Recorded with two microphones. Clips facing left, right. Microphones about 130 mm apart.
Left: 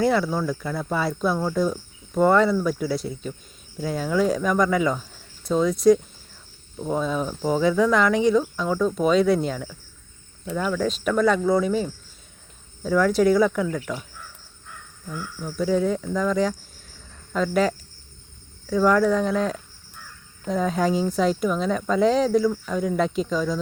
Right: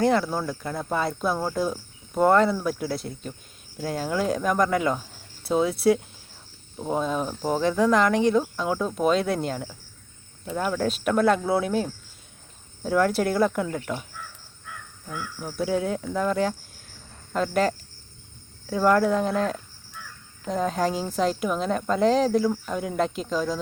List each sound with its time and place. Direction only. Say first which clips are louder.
0.0 s speech: left 1 dB; centre (ahead or behind)
10.6 s speech: left 1 dB; 10° right (ahead or behind)
13.7 s speech: left 1 dB; 25° right (ahead or behind)
15.4 s speech: left 3 dB; 10° right (ahead or behind)